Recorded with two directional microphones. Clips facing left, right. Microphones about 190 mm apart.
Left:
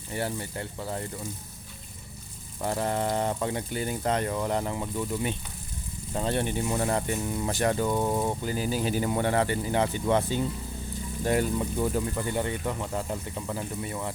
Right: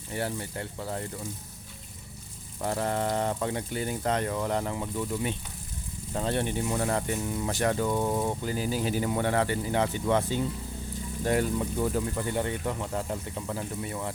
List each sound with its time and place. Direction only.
0.1 s speech: 5° left (ahead or behind)
2.6 s speech: 5° left (ahead or behind)
7.3 s speech: 30° left (ahead or behind)
7.5 s speech: 15° left (ahead or behind)
9.2 s speech: 20° left (ahead or behind)